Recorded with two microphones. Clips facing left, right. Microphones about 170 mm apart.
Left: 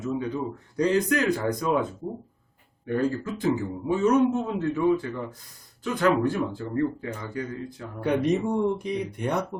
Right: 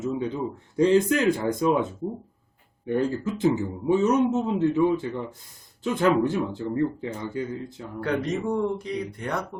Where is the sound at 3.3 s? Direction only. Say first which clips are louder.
Right 2 dB; 20° right (ahead or behind).